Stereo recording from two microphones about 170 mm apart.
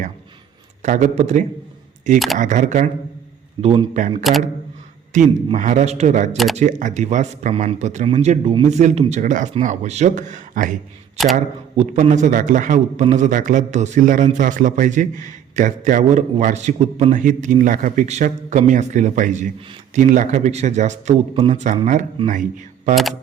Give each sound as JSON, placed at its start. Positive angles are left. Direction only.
{"t": 0.8, "sound": "a man's voice", "side_deg": -50}
{"t": 2.1, "sound": "speech", "side_deg": 0}
{"t": 2.4, "sound": "a man's voice", "side_deg": -45}
{"t": 4.2, "sound": "speech", "side_deg": 0}
{"t": 5.1, "sound": "a man's voice", "side_deg": -45}
{"t": 6.3, "sound": "speech", "side_deg": 0}
{"t": 6.6, "sound": "a man's voice", "side_deg": -50}
{"t": 22.2, "sound": "speech", "side_deg": -30}